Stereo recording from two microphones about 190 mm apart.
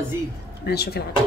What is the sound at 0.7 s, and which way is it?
Speech, 55° left (ahead or behind).